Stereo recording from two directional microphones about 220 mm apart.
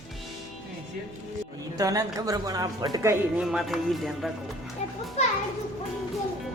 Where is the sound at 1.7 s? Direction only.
15° right (ahead or behind).